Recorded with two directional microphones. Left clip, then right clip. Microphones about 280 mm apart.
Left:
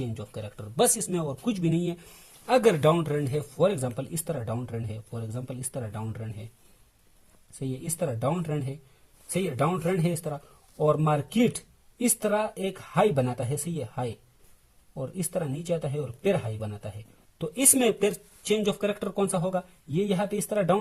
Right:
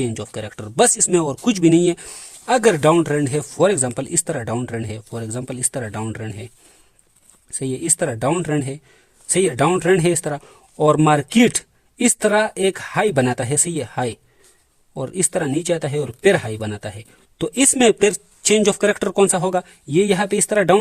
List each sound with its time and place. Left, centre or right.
0.1 s speech: right
7.6 s speech: right